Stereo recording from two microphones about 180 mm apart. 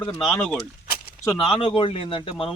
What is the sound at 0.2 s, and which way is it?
Speech, centre (ahead or behind).